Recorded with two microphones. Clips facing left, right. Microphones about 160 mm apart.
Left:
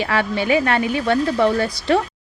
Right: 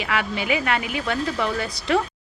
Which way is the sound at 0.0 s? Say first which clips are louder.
Left 5 dB; 30° left (ahead or behind).